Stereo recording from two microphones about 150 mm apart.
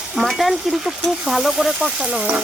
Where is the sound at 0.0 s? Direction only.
Centre (ahead or behind).